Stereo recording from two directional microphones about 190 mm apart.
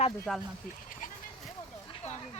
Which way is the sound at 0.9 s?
45° left (ahead or behind).